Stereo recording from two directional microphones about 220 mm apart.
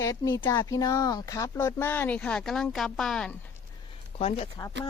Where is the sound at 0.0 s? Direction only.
15° left (ahead or behind).